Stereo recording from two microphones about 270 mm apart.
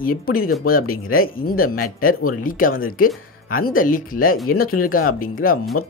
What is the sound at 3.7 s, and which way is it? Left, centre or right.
Speech, left.